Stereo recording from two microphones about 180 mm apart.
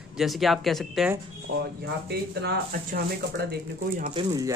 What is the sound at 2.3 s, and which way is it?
Speech, 65° right (ahead or behind).